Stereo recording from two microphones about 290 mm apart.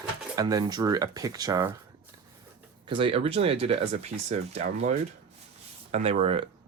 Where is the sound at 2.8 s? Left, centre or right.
Centre.